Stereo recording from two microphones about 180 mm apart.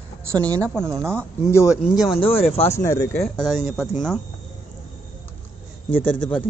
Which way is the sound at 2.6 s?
15° left (ahead or behind).